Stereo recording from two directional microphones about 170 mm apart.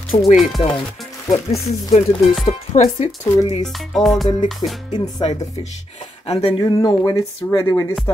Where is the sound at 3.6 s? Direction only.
Centre (ahead or behind).